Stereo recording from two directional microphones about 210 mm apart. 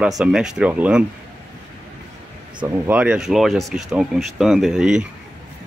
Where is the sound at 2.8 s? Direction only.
5° right (ahead or behind).